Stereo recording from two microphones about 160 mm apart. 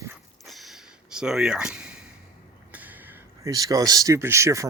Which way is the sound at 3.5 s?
20° right (ahead or behind).